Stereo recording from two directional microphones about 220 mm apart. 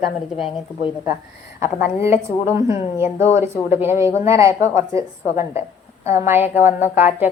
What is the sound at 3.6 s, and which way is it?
A woman's voice, 10° right (ahead or behind).